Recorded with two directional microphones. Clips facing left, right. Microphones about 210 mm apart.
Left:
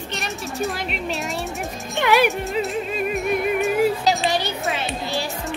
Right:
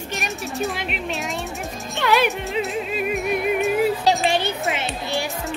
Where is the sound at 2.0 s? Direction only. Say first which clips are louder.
Left 2 dB; 15° left (ahead or behind).